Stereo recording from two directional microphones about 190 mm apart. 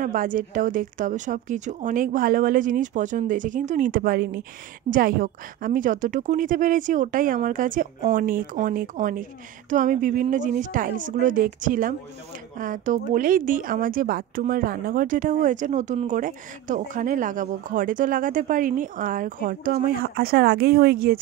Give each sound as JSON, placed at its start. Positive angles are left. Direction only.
{"t": 0.0, "sound": "speech", "side_deg": -45}